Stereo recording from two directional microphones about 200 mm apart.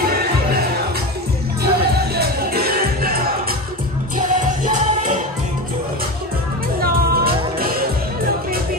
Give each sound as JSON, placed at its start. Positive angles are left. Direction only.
{"t": 1.6, "sound": "music", "side_deg": -50}
{"t": 6.8, "sound": "music", "side_deg": -50}